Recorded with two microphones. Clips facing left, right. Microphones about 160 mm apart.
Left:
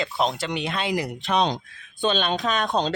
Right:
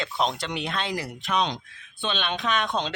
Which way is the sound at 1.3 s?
35° left (ahead or behind).